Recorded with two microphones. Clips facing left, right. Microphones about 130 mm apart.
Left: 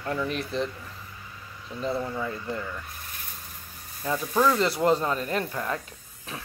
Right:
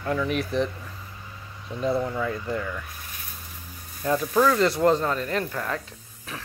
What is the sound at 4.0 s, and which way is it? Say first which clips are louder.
Speech: right 3 dB; centre (ahead or behind).